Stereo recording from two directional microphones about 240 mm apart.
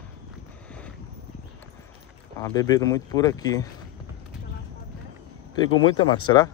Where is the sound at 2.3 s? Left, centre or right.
Centre.